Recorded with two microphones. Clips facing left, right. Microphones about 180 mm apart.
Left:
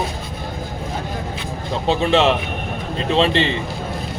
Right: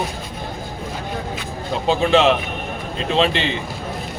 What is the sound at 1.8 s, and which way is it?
Speech, centre (ahead or behind).